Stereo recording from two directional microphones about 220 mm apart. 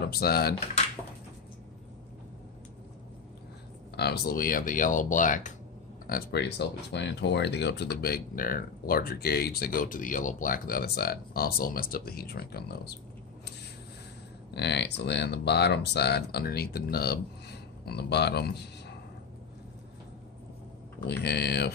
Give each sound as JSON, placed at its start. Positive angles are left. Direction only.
{"t": 0.0, "sound": "speech", "side_deg": 45}
{"t": 3.9, "sound": "speech", "side_deg": 45}
{"t": 6.0, "sound": "speech", "side_deg": 45}
{"t": 14.5, "sound": "speech", "side_deg": 50}
{"t": 21.2, "sound": "speech", "side_deg": 50}